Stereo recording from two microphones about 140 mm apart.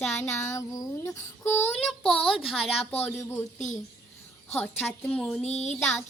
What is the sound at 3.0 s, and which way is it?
Child singing, 20° left (ahead or behind).